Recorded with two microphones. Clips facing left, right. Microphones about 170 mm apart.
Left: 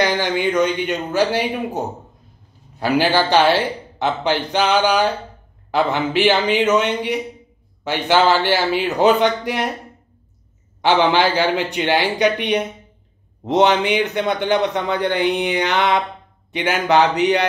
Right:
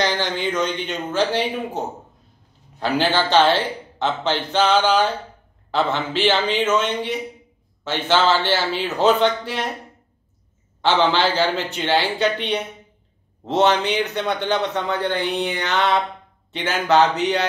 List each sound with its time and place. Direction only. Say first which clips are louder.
0.0 s a man's voice: left 4 dB; 10° left (ahead or behind)
10.8 s speech: left 3 dB; 15° left (ahead or behind)